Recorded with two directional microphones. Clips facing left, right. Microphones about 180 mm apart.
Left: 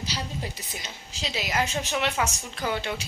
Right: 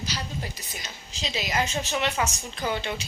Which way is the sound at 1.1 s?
10° left (ahead or behind).